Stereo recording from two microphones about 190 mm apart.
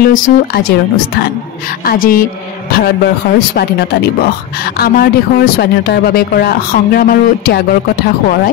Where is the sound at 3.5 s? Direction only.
55° left (ahead or behind).